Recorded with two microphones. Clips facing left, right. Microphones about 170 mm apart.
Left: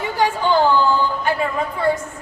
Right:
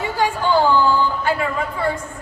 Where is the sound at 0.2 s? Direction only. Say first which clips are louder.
Left 1 dB; 15° left (ahead or behind).